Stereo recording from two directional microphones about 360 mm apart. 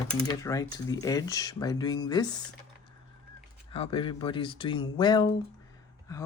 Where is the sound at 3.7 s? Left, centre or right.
Centre.